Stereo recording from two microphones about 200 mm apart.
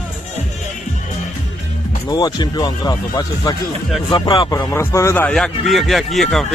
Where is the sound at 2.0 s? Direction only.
20° left (ahead or behind).